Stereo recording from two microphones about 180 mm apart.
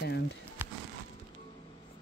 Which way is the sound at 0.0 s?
70° left (ahead or behind).